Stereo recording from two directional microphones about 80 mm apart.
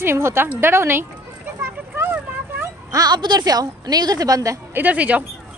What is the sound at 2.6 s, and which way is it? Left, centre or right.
Speech, right.